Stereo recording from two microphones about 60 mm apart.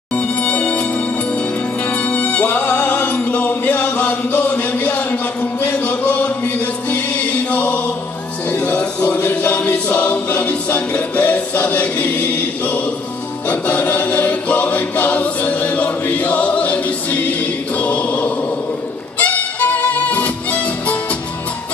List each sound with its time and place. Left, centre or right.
0.1 s music: left
2.0 s music: left
8.5 s choir: left
19.1 s music: left